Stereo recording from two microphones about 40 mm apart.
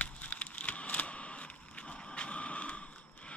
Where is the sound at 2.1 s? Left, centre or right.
Left.